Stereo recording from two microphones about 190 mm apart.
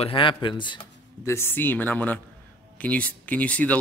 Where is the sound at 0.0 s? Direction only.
25° left (ahead or behind).